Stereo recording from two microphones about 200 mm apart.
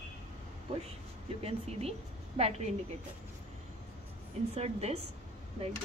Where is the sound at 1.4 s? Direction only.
30° right (ahead or behind).